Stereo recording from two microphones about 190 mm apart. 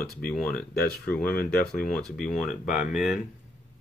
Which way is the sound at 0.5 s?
50° left (ahead or behind).